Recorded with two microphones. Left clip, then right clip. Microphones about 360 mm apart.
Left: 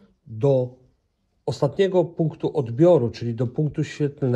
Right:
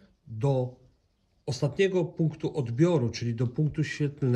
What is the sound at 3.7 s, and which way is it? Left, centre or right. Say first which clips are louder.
Speech: left 6 dB; centre.